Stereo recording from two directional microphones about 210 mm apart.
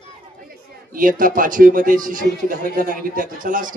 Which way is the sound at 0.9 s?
40° right (ahead or behind).